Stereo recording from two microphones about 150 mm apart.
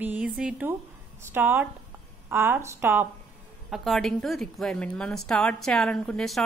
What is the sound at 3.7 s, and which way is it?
A woman's voice, centre (ahead or behind).